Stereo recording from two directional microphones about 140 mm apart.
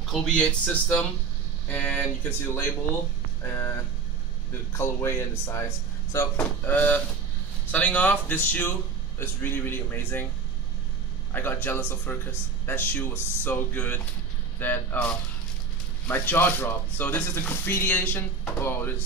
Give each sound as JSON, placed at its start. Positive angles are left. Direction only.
{"t": 0.0, "sound": "speech", "side_deg": 5}
{"t": 4.7, "sound": "speech", "side_deg": 20}
{"t": 11.3, "sound": "speech", "side_deg": 15}
{"t": 16.1, "sound": "speech", "side_deg": 15}